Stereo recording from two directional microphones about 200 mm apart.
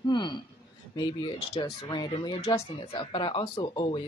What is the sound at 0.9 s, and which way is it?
Speech, 20° left (ahead or behind).